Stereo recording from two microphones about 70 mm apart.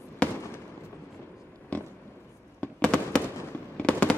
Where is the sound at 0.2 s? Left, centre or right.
Centre.